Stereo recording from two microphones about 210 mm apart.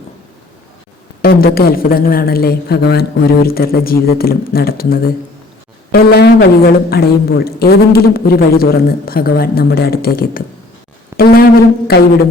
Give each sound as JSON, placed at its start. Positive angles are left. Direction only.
{"t": 1.2, "sound": "a woman's voice", "side_deg": 45}